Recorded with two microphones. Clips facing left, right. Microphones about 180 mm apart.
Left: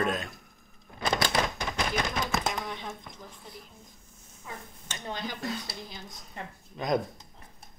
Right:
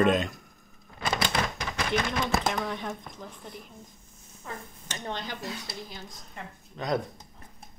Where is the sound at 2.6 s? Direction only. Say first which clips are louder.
Right 4 dB; 60° right (ahead or behind).